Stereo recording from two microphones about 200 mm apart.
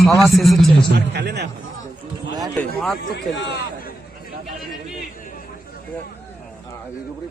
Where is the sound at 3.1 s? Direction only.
55° left (ahead or behind).